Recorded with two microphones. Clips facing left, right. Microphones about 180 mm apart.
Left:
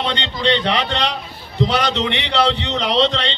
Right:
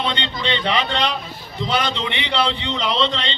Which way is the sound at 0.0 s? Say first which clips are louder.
Left 3 dB; 80° left.